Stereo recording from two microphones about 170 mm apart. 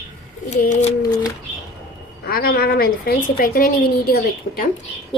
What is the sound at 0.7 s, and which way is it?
Speech, 40° left (ahead or behind).